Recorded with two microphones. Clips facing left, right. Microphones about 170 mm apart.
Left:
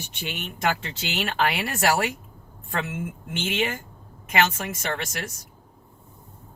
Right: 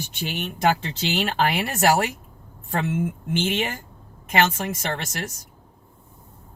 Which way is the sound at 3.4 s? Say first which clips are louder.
Right 1 dB; 35° right (ahead or behind).